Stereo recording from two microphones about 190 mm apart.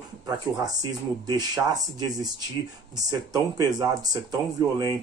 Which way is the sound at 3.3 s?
20° right (ahead or behind).